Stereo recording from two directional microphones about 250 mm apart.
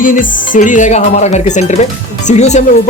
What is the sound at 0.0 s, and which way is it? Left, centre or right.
Speech, left.